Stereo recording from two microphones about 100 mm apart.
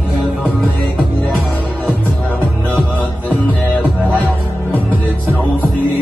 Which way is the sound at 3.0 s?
15° left (ahead or behind).